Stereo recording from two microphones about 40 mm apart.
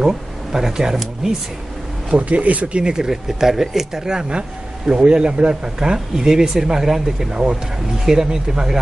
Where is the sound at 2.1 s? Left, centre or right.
Right.